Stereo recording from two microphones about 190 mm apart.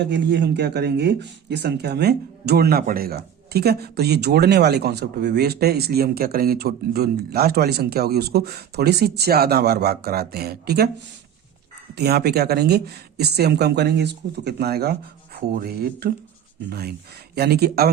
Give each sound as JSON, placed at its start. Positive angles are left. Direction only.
{"t": 0.0, "sound": "speech", "side_deg": -65}
{"t": 11.9, "sound": "speech", "side_deg": -60}